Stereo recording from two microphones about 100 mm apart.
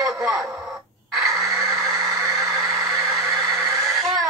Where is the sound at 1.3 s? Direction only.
30° right (ahead or behind).